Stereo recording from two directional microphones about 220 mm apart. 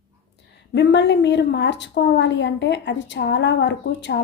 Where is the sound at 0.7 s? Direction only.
50° left (ahead or behind).